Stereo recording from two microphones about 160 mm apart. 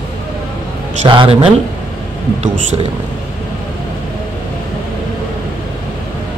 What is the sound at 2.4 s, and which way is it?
Speech, 45° right (ahead or behind).